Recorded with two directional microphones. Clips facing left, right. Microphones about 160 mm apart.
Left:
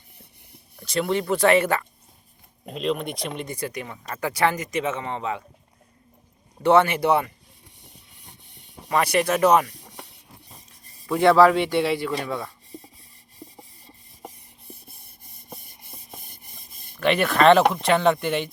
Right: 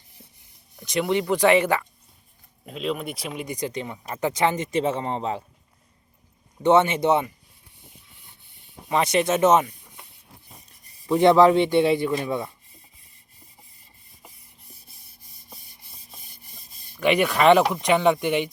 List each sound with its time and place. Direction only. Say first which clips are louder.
0.8 s speech: right 1 dB; 20° right (ahead or behind)
2.6 s speech: left 2 dB; centre (ahead or behind); by 5.4 s 35° right (ahead or behind)
6.6 s speech: even; 20° right (ahead or behind)
8.9 s speech: even; 20° right (ahead or behind)
9.7 s a sound: left 7 dB; 75° left (ahead or behind)
11.0 s speech: right 1 dB; 20° right (ahead or behind)
13.4 s rub: left 15 dB; 85° left
15.4 s rub: left 7 dB; 50° left (ahead or behind)
17.0 s speech: left 1 dB; 15° right (ahead or behind)